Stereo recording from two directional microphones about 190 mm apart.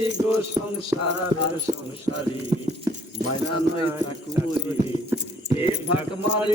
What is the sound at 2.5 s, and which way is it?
Horse, 30° right (ahead or behind).